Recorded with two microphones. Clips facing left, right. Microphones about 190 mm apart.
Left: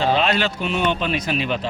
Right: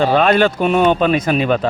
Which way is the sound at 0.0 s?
50° right (ahead or behind).